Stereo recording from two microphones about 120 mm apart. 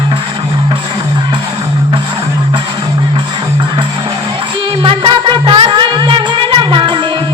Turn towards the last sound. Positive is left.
turn(degrees=-45)  # may be behind; listen again after turning